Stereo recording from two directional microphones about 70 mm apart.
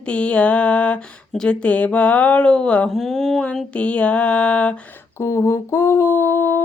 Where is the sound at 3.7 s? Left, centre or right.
Centre.